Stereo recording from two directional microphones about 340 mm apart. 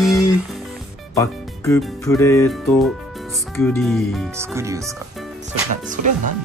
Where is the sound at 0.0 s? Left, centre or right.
Centre.